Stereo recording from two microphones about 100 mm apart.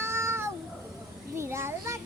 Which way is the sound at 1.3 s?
25° right (ahead or behind).